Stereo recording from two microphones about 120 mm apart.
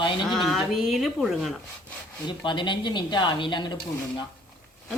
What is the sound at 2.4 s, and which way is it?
Speech, 40° left (ahead or behind).